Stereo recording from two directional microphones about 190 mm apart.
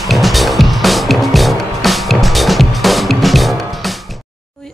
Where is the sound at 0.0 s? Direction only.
Centre (ahead or behind).